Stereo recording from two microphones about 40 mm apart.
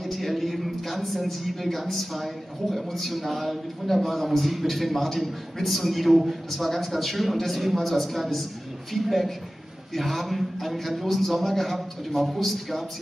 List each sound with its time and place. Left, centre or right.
0.0 s a man's voice: centre